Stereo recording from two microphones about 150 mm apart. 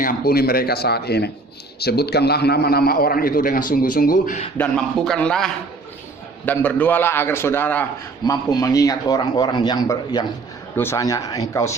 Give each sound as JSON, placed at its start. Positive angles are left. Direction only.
{"t": 0.0, "sound": "a man's voice", "side_deg": 80}
{"t": 4.5, "sound": "a man's voice", "side_deg": 5}
{"t": 8.2, "sound": "a man's voice", "side_deg": 25}